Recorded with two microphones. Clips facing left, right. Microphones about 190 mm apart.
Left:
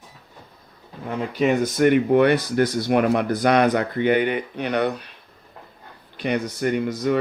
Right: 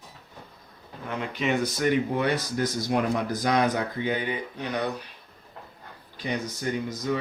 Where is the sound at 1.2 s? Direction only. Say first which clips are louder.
Left 6 dB; 45° left (ahead or behind); by 5.0 s 70° left (ahead or behind).